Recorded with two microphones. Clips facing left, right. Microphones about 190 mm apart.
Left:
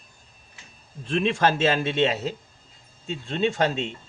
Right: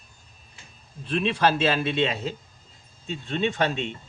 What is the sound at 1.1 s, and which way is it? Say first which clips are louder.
Speech: left 1 dB; 45° left (ahead or behind).